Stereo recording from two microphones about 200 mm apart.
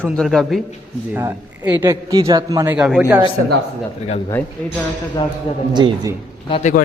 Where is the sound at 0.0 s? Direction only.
5° left (ahead or behind).